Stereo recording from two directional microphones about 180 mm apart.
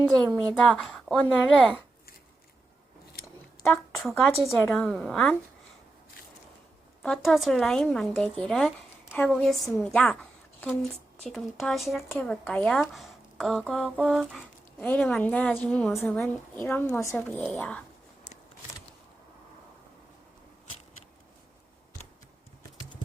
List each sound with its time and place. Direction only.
0.6 s a woman's voice: centre (ahead or behind)
3.2 s scissors: 60° left (ahead or behind)
3.6 s a woman's voice: centre (ahead or behind)
7.0 s a woman's voice: centre (ahead or behind)
11.2 s a woman's voice: centre (ahead or behind)
18.3 s a sound: 40° left (ahead or behind)